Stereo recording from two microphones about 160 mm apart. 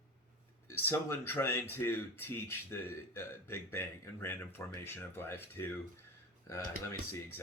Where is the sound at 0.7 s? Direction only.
15° left (ahead or behind).